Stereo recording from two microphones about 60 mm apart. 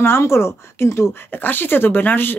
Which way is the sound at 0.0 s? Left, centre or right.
Left.